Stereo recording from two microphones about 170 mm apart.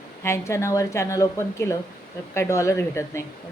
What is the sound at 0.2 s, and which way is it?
Speech, 15° left (ahead or behind).